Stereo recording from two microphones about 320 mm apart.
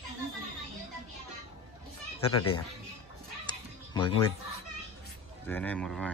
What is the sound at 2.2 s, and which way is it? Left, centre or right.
Speech, centre.